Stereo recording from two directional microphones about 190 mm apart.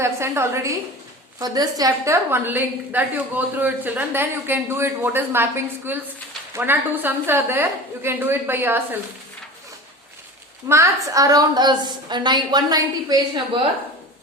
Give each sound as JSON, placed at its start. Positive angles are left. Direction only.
{"t": 0.0, "sound": "a woman's voice", "side_deg": -15}
{"t": 10.7, "sound": "a woman's voice", "side_deg": -15}